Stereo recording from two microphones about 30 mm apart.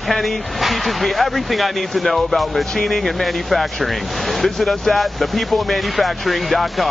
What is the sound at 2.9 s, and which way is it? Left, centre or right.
Speech, centre.